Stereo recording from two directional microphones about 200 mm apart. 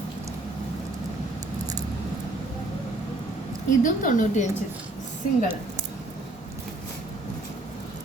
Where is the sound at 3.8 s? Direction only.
40° left (ahead or behind).